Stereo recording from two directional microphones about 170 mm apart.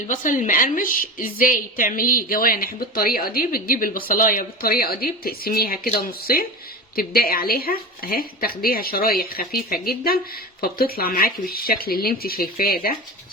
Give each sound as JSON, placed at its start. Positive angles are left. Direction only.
{"t": 0.1, "sound": "a woman's voice", "side_deg": 50}